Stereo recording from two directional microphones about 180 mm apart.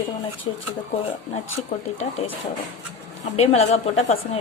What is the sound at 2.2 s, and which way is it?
A woman's voice, 35° left (ahead or behind).